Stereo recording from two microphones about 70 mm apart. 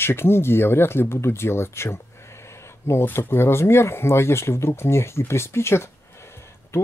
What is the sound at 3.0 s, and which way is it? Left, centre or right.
Speech, left.